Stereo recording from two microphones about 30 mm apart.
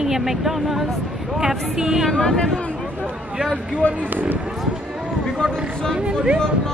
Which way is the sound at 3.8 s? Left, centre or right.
Left.